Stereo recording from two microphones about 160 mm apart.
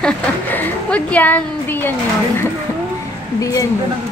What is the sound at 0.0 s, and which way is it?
A woman's voice, 10° left (ahead or behind).